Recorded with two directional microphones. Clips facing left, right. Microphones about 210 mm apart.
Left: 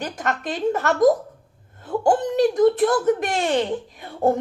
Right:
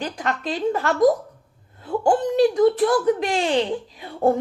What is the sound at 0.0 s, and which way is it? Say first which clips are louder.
Speech: even; 45° left (ahead or behind).